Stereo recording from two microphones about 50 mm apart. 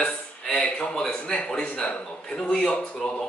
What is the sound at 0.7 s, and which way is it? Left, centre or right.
A man's voice, centre.